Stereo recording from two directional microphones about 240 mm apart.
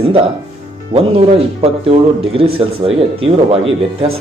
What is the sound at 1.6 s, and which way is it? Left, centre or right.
Speech, right.